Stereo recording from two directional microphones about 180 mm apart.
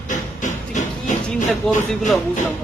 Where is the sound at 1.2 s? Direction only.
5° left (ahead or behind).